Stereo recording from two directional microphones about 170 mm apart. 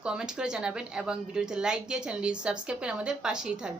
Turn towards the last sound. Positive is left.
turn(degrees=-5)  # may be behind; listen again after turning